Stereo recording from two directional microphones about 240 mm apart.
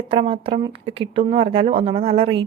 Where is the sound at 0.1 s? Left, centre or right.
Right.